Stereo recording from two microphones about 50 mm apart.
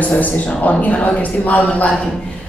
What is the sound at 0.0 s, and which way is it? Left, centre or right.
A woman's voice, left.